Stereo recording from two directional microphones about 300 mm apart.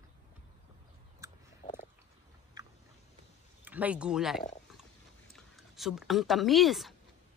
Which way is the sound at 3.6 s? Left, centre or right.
Centre.